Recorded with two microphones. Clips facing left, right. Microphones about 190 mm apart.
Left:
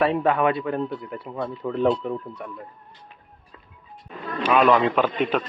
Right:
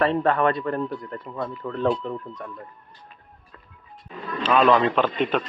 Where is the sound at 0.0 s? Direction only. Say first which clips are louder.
Even; 5° left (ahead or behind).